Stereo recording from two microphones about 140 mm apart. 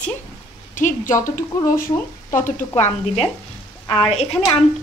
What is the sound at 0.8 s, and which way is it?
Speech, 65° left (ahead or behind).